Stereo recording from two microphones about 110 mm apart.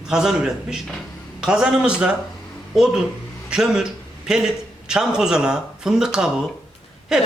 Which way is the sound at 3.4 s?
5° right (ahead or behind).